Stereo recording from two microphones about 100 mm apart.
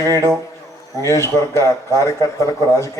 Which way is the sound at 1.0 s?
30° left (ahead or behind).